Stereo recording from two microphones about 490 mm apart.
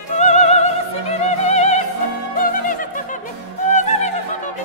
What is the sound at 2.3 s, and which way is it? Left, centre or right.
Music, centre.